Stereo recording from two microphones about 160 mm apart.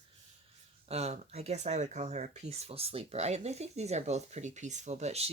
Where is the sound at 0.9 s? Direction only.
40° right (ahead or behind).